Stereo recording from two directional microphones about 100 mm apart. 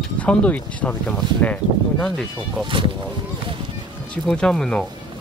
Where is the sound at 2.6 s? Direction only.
55° right (ahead or behind).